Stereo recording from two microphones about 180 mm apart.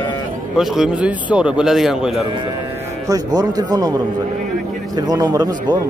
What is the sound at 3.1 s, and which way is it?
Speech, 20° right (ahead or behind).